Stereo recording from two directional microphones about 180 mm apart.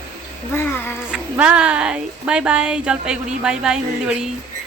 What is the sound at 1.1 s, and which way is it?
Speech, 5° right (ahead or behind).